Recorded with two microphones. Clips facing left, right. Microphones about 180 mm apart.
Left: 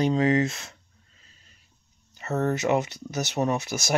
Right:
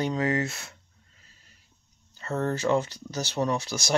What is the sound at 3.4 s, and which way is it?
Speech, 35° left (ahead or behind).